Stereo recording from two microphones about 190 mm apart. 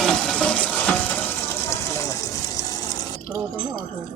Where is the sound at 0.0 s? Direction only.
5° left (ahead or behind); by 2.7 s 20° left (ahead or behind).